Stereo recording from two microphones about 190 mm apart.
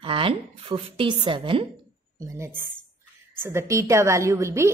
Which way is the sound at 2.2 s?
15° right (ahead or behind).